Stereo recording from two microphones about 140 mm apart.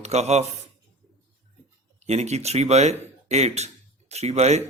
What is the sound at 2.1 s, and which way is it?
A man's voice, 50° right (ahead or behind).